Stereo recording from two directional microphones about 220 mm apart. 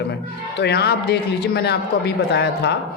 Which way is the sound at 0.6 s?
50° left (ahead or behind).